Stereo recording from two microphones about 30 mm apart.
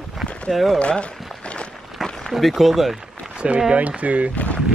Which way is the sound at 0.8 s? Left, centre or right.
Left.